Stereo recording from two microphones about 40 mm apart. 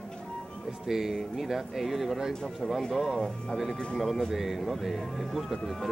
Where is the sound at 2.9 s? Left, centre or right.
Centre.